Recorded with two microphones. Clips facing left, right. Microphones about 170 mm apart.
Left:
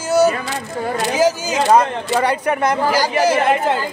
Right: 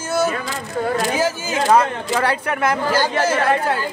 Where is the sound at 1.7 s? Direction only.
15° left (ahead or behind).